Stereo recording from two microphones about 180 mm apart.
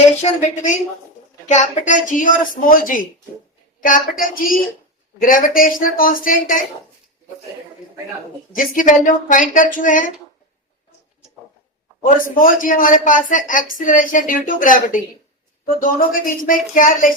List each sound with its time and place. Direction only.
0.2 s a woman's voice: 40° left (ahead or behind)
8.5 s speech: 45° left (ahead or behind)
12.0 s speech: 50° left (ahead or behind)